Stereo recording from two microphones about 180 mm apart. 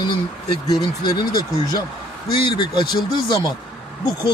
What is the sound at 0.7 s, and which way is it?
Speech, 25° left (ahead or behind).